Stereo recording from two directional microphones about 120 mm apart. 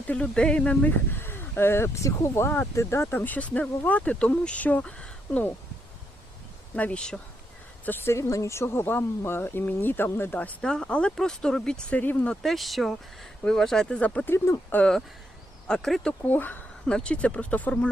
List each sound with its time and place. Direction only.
0.1 s speech: 10° left (ahead or behind)
6.7 s speech: 10° left (ahead or behind)
7.9 s speech: 20° left (ahead or behind)
14.3 s speech: 25° left (ahead or behind)
14.8 s speech: 5° left (ahead or behind)